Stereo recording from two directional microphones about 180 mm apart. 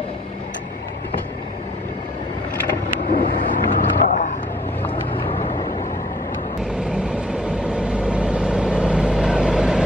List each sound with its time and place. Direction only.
3.1 s vehicle: 50° left (ahead or behind)
5.1 s vehicle: 30° left (ahead or behind)
7.4 s vehicle: 5° right (ahead or behind)